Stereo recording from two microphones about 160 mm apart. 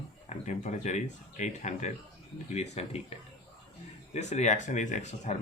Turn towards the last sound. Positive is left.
turn(degrees=45)  # may be behind; listen again after turning